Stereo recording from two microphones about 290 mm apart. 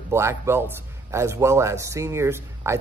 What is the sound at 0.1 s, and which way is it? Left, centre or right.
A man's voice, centre.